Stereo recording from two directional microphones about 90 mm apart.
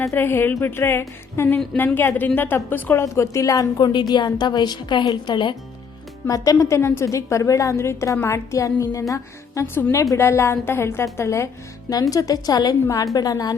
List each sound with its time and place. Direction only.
0.0 s a woman's voice: 25° left (ahead or behind)
3.0 s a woman's voice: 35° left (ahead or behind); by 5.5 s 60° left (ahead or behind)
6.2 s a woman's voice: 40° left (ahead or behind)
12.1 s a woman's voice: 45° left (ahead or behind)